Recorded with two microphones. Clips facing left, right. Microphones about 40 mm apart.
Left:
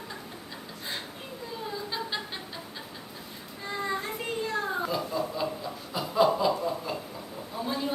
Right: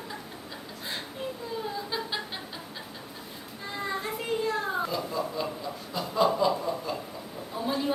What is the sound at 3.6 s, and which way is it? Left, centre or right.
Music, centre.